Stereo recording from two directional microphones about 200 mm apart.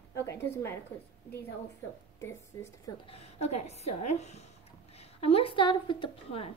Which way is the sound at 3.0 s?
30° left (ahead or behind).